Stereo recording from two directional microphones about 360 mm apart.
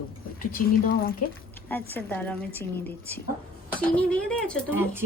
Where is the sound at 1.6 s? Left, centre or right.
Centre.